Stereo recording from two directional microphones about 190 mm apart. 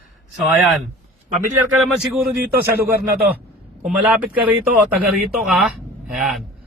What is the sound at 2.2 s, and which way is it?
Speech, 50° right (ahead or behind).